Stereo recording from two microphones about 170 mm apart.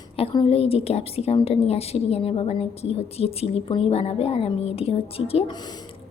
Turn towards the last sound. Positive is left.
turn(degrees=35)  # may be behind; listen again after turning